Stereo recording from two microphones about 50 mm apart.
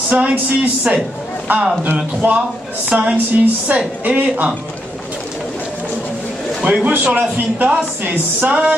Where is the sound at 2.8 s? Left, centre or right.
Centre.